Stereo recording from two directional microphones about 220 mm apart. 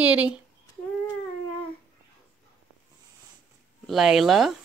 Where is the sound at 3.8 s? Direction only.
Centre (ahead or behind).